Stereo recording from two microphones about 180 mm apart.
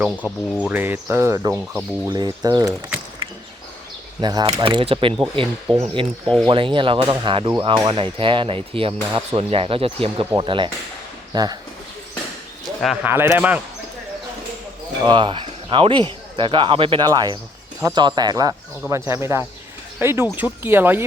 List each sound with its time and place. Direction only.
0.2 s speech: 5° left (ahead or behind)
0.6 s speech: 10° right (ahead or behind)
4.2 s speech: 25° right (ahead or behind)
6.2 s speech: 5° left (ahead or behind)
6.5 s speech: 30° right (ahead or behind)
12.6 s speech: centre (ahead or behind)
13.1 s speech: 10° right (ahead or behind)
15.0 s speech: 25° right (ahead or behind)